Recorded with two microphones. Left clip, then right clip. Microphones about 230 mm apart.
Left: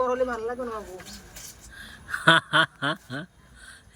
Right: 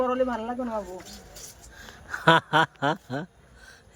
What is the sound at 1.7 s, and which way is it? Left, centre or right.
Speech, centre.